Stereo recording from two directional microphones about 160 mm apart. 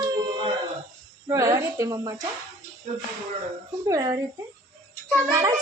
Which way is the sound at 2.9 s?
45° right (ahead or behind).